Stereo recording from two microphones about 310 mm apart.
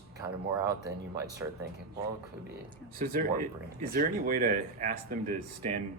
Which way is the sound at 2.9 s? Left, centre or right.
Right.